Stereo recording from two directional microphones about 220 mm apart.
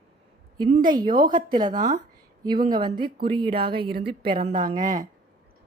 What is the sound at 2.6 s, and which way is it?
Speech, 20° right (ahead or behind).